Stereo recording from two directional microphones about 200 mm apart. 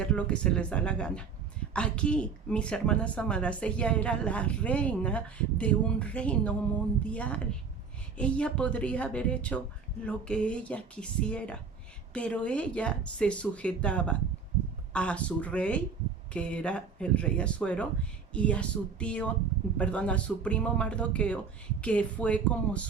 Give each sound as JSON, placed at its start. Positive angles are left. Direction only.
{"t": 0.0, "sound": "a woman's voice", "side_deg": 5}